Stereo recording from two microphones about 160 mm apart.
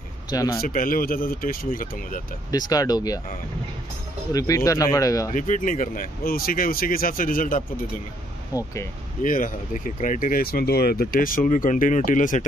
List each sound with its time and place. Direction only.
0.3 s speech: 20° left (ahead or behind)
0.6 s speech: 65° left (ahead or behind)
2.5 s speech: 25° left (ahead or behind)
4.3 s speech: 20° left (ahead or behind)
5.3 s speech: 55° left (ahead or behind)
8.5 s speech: 25° left (ahead or behind)
9.2 s speech: 55° left (ahead or behind)